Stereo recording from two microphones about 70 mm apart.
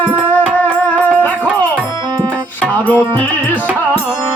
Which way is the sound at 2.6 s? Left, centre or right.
Left.